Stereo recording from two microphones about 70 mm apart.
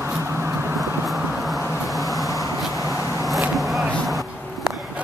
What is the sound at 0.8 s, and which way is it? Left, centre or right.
Vehicle, centre.